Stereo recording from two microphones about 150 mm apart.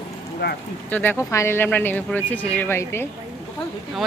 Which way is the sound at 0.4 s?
90° left.